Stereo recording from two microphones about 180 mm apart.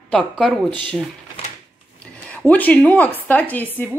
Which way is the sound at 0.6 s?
25° right (ahead or behind).